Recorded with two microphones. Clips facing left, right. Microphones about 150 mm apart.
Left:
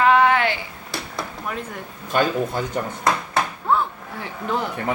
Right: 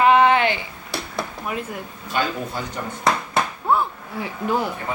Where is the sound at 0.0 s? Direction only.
20° right (ahead or behind).